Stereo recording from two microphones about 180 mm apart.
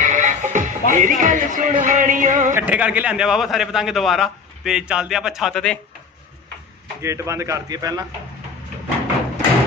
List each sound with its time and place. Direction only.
0.0 s speech: 45° right (ahead or behind)
2.5 s a man's voice: 10° right (ahead or behind)
7.0 s a man's voice: 15° right (ahead or behind)